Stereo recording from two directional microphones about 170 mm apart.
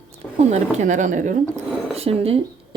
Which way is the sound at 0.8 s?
45° right (ahead or behind).